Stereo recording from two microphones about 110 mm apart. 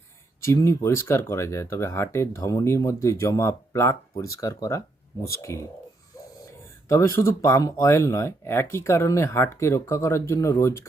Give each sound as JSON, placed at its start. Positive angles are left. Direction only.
{"t": 0.4, "sound": "speech", "side_deg": 25}
{"t": 6.8, "sound": "speech", "side_deg": 25}